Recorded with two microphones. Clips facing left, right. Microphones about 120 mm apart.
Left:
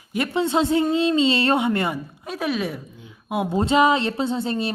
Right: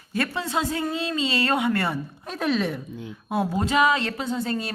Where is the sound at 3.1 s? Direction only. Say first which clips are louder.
Left 1 dB; 15° left (ahead or behind).